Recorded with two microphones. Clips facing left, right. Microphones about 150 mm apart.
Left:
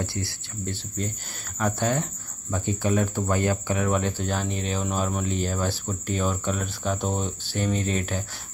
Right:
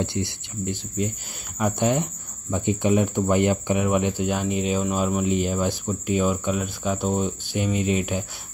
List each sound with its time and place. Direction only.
0.0 s speech: 20° right (ahead or behind)